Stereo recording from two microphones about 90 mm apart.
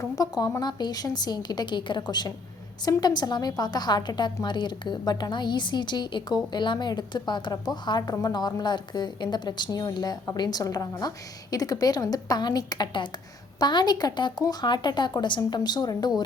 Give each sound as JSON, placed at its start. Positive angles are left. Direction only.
{"t": 0.0, "sound": "a woman's voice", "side_deg": 45}